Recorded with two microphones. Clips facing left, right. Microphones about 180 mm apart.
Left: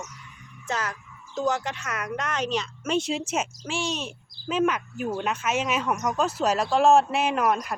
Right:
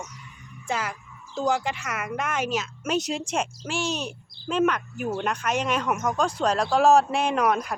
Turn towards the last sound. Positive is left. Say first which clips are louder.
# right 1 dB
turn(degrees=0)  # may be behind; listen again after turning